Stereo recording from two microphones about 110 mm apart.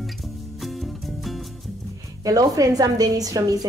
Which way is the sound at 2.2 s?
35° right (ahead or behind).